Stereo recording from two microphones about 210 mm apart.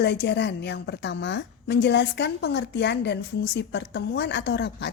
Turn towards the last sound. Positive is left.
turn(degrees=55)  # may be behind; listen again after turning